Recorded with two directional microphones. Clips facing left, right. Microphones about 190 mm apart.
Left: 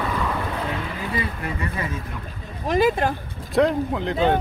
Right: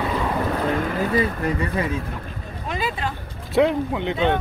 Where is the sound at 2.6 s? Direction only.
45° left (ahead or behind).